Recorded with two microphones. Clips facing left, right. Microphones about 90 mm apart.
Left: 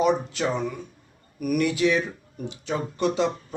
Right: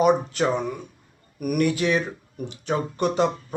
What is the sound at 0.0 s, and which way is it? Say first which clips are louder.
Speech: right 3 dB; 50° right (ahead or behind).